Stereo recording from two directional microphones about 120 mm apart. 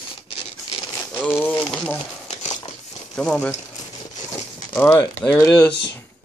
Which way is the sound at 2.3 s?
75° left (ahead or behind).